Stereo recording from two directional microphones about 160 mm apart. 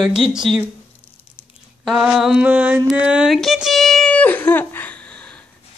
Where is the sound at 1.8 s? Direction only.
Centre (ahead or behind).